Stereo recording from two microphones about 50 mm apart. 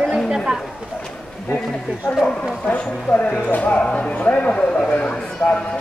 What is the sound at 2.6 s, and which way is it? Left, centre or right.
Speech, left.